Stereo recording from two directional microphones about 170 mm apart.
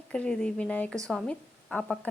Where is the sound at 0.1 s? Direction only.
5° left (ahead or behind).